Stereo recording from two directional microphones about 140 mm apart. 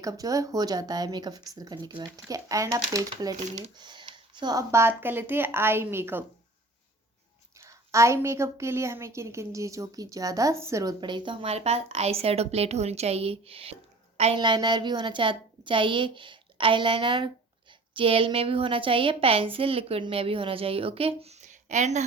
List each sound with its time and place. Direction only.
0.0 s a woman's voice: 25° right (ahead or behind)
2.2 s a woman's voice: 25° right (ahead or behind)
3.8 s a sound: 35° right (ahead or behind)
4.7 s speech: 15° right (ahead or behind)
7.6 s a woman's voice: 20° right (ahead or behind); by 13.7 s 45° right (ahead or behind)
14.3 s a woman's voice: 30° right (ahead or behind); by 22.0 s 60° right (ahead or behind)